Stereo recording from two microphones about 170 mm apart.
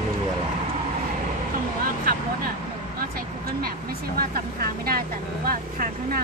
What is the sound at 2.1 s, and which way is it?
Vehicle, 55° right (ahead or behind).